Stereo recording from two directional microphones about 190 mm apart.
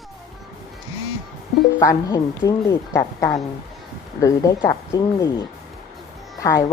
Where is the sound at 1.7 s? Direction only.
20° left (ahead or behind).